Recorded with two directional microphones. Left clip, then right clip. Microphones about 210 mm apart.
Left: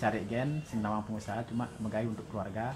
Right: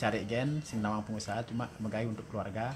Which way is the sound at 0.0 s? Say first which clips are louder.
Even; 40° right (ahead or behind).